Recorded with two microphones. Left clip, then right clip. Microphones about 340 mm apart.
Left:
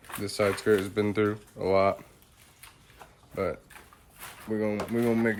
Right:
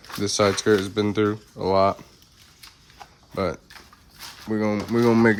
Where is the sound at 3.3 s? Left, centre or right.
Centre.